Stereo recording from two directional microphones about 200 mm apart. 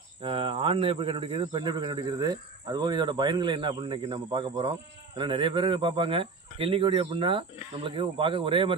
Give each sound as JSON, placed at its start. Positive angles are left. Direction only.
{"t": 0.2, "sound": "speech", "side_deg": -25}